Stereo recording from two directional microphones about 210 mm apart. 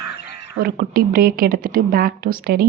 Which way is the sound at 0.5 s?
45° right (ahead or behind).